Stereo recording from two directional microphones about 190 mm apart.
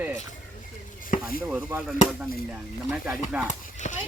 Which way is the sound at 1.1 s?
50° left (ahead or behind).